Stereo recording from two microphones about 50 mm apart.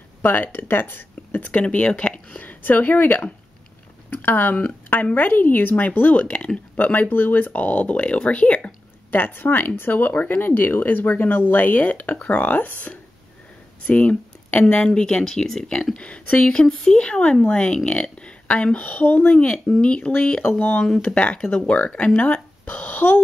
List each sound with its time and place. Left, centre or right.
0.2 s speech: left
1.5 s speech: left
6.8 s speech: left
9.1 s speech: left; by 16.0 s centre
16.0 s speech: left
16.6 s speech: centre
16.9 s speech: left
20.5 s speech: left
20.8 s speech: centre
21.1 s speech: left